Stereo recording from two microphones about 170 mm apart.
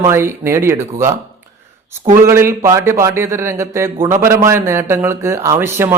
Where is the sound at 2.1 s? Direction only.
15° right (ahead or behind).